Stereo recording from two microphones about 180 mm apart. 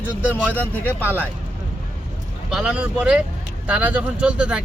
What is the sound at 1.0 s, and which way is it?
Speech, 10° right (ahead or behind).